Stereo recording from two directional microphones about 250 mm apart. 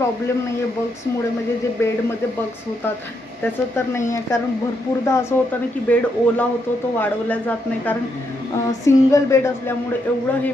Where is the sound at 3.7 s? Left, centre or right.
Centre.